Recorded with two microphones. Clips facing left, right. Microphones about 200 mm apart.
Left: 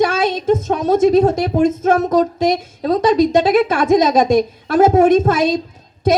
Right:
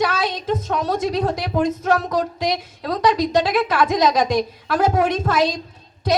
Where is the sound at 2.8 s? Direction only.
25° left (ahead or behind).